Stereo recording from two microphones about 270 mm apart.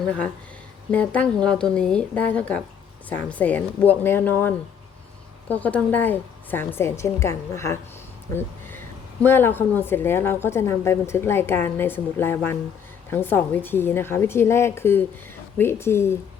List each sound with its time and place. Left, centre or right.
0.9 s a woman's voice: centre
9.2 s a woman's voice: centre